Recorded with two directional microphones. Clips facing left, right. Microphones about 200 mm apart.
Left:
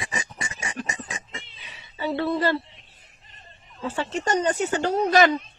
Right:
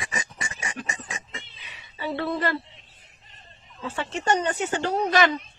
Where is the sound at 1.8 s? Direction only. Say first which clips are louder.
Left 3 dB; 30° left (ahead or behind).